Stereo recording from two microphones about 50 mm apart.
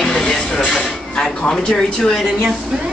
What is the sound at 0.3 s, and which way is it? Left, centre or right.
Music, centre.